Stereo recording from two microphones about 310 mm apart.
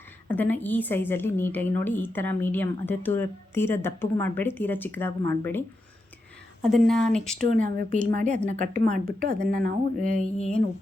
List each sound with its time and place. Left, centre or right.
0.3 s a woman's voice: centre
7.3 s speech: right